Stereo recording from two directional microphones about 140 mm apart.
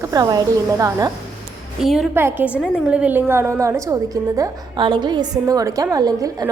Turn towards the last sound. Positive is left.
turn(degrees=-25)  # may be behind; listen again after turning